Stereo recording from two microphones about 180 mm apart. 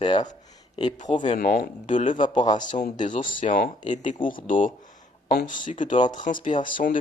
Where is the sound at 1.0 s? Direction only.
40° left (ahead or behind).